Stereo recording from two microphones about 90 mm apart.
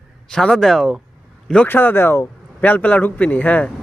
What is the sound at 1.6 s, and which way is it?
Speech, 20° left (ahead or behind).